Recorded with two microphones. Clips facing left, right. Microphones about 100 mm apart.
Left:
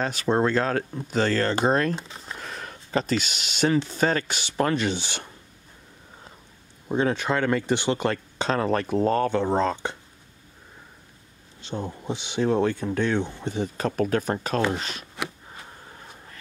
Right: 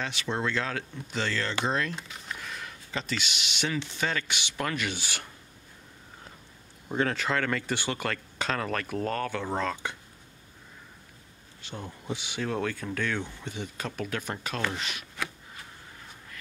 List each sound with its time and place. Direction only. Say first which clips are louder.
0.0 s speech: left 8 dB; 40° left (ahead or behind)
2.0 s speech: left 3 dB; 30° left (ahead or behind)
6.9 s speech: left 4 dB; 20° left (ahead or behind)
11.6 s speech: left 8 dB; 25° left (ahead or behind)